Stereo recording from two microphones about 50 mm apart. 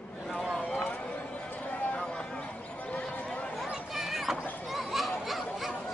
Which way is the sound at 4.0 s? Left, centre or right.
Centre.